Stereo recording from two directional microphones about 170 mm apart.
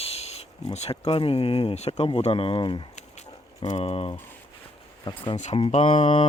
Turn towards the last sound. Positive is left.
turn(degrees=30)  # may be behind; listen again after turning